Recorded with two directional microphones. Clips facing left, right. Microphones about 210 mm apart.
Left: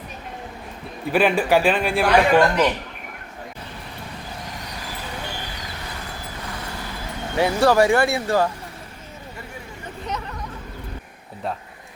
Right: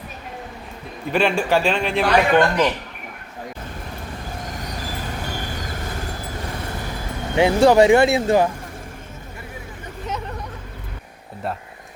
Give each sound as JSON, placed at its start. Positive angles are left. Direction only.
{"t": 1.1, "sound": "a man's voice", "side_deg": 10}
{"t": 5.4, "sound": "vehicle", "side_deg": -45}
{"t": 7.3, "sound": "speech", "side_deg": -20}